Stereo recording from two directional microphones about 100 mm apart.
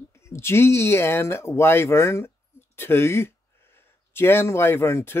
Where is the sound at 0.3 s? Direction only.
25° left (ahead or behind).